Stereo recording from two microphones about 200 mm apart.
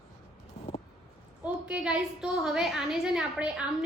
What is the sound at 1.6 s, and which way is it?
A woman's voice, 5° right (ahead or behind).